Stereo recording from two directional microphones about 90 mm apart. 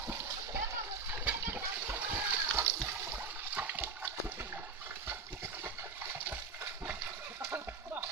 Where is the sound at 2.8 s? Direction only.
30° right (ahead or behind).